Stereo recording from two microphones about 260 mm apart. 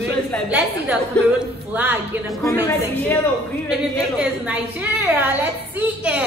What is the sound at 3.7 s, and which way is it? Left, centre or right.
A woman's voice, centre.